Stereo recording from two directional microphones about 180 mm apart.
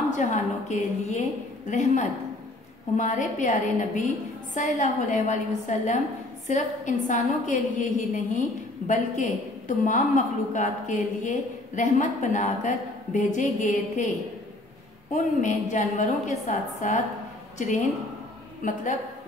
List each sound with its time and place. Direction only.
0.1 s a woman's voice: 40° left (ahead or behind)
15.1 s a woman's voice: 45° left (ahead or behind)
18.6 s a woman's voice: 45° left (ahead or behind)